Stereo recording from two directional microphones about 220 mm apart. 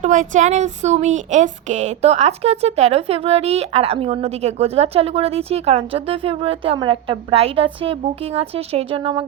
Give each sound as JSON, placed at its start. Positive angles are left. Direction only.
{"t": 0.0, "sound": "speech", "side_deg": -35}